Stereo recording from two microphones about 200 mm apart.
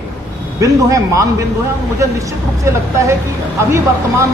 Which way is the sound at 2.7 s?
15° right (ahead or behind).